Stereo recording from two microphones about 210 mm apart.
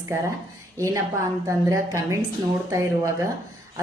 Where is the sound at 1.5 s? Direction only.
15° right (ahead or behind).